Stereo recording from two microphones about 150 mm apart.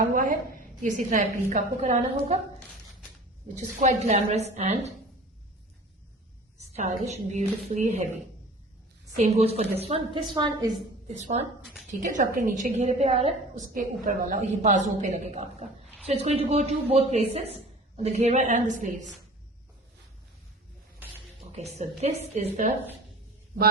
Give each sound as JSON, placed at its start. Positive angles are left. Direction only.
{"t": 0.0, "sound": "a sound", "side_deg": -65}
{"t": 0.8, "sound": "a woman's voice", "side_deg": -60}
{"t": 3.5, "sound": "a man's voice", "side_deg": -50}
{"t": 6.7, "sound": "a man's voice", "side_deg": -50}
{"t": 9.1, "sound": "a man's voice", "side_deg": -45}
{"t": 11.1, "sound": "a man's voice", "side_deg": -50}
{"t": 11.9, "sound": "a woman's voice", "side_deg": -60}
{"t": 12.7, "sound": "a man's voice", "side_deg": -50}
{"t": 13.7, "sound": "a woman's voice", "side_deg": -65}
{"t": 21.5, "sound": "a man's voice", "side_deg": -45}